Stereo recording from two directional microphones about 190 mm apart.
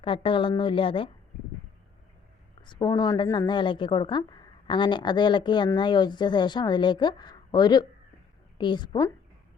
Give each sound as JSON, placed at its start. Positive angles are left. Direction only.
{"t": 0.0, "sound": "a woman's voice", "side_deg": 25}
{"t": 2.6, "sound": "a woman's voice", "side_deg": 25}